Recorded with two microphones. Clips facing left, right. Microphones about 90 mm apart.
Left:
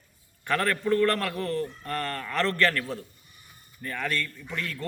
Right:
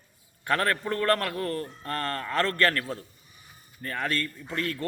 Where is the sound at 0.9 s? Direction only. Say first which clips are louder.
Left 2 dB; 40° right (ahead or behind).